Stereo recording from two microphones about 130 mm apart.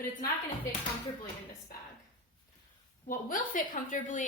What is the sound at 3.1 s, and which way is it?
A woman's voice, 90° left.